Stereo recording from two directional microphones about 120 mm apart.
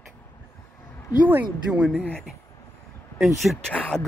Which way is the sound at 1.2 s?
15° right (ahead or behind).